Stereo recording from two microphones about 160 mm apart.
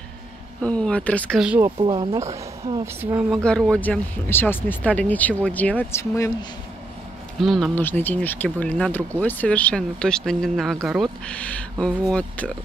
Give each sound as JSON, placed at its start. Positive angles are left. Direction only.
{"t": 0.6, "sound": "speech", "side_deg": 5}
{"t": 1.8, "sound": "speech", "side_deg": -30}
{"t": 2.8, "sound": "speech", "side_deg": -15}
{"t": 3.4, "sound": "speech", "side_deg": 5}
{"t": 7.4, "sound": "speech", "side_deg": 0}
{"t": 7.8, "sound": "speech", "side_deg": 10}